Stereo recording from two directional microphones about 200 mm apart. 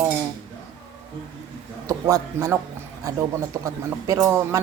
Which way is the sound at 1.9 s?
15° right (ahead or behind).